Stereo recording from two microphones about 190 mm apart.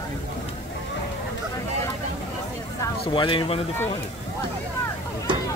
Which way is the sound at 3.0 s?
25° left (ahead or behind).